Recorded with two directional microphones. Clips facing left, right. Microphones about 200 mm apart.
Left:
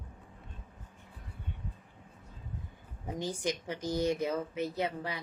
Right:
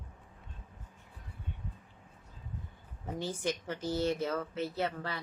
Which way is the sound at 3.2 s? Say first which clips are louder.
Left 1 dB; 15° left (ahead or behind).